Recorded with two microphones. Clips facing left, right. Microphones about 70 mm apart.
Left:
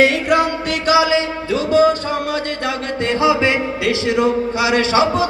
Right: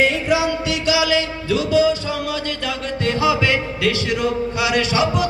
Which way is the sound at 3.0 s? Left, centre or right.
Left.